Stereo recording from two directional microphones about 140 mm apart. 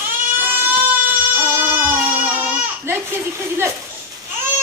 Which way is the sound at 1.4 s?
15° right (ahead or behind).